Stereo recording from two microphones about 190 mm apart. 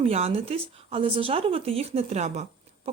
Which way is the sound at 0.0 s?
35° right (ahead or behind).